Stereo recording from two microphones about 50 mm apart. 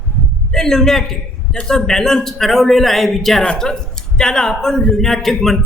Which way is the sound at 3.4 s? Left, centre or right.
Centre.